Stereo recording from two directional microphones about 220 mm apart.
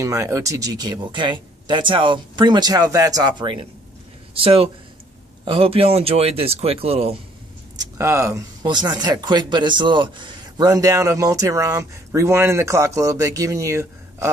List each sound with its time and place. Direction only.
0.0 s speech: 15° right (ahead or behind)
7.7 s speech: 15° right (ahead or behind)